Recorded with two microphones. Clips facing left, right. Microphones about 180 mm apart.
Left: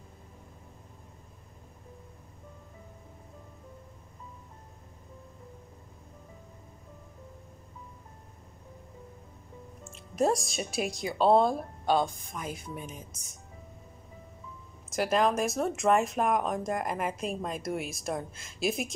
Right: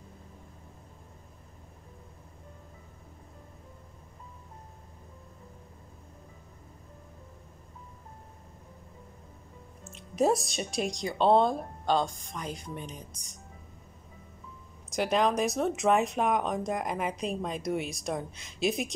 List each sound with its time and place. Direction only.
9.8 s speech: centre (ahead or behind)
14.9 s speech: centre (ahead or behind)